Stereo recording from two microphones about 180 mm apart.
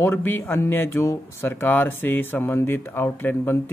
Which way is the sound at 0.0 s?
10° left (ahead or behind).